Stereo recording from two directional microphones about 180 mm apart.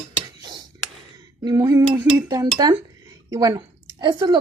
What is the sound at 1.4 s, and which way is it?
Speech, 20° right (ahead or behind).